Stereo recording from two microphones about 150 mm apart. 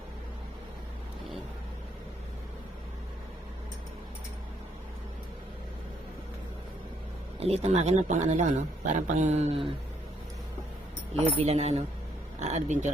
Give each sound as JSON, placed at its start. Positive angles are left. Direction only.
{"t": 7.3, "sound": "speech", "side_deg": -45}
{"t": 11.1, "sound": "speech", "side_deg": -45}